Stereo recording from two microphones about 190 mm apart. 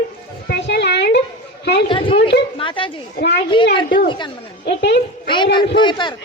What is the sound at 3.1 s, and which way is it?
Speech, 55° left (ahead or behind).